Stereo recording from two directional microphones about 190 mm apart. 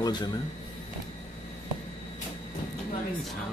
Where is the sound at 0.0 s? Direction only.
20° left (ahead or behind).